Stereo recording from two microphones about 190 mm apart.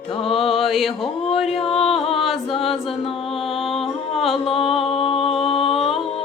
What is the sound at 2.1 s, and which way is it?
Chant, centre (ahead or behind).